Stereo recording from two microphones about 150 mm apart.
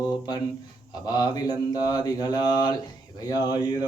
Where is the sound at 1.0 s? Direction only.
25° left (ahead or behind).